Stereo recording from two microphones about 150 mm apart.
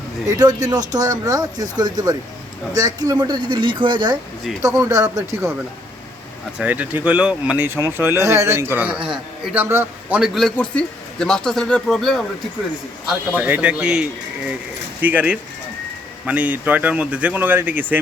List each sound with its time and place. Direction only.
0.3 s speech: 25° right (ahead or behind)
6.6 s speech: 10° right (ahead or behind)
9.6 s speech: 15° right (ahead or behind)
10.2 s speech: centre (ahead or behind)
13.1 s speech: 10° right (ahead or behind)